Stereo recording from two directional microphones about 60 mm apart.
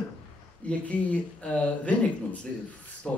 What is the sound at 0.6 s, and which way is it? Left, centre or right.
Speech, left.